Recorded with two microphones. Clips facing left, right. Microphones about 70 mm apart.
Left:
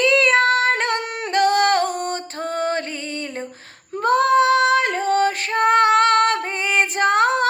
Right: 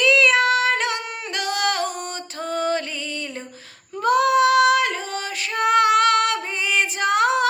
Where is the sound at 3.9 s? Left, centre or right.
Left.